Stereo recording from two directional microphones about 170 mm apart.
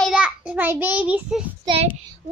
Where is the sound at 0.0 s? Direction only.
5° right (ahead or behind).